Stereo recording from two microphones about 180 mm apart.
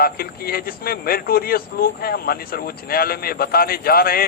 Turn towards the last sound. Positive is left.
turn(degrees=55)  # may be behind; listen again after turning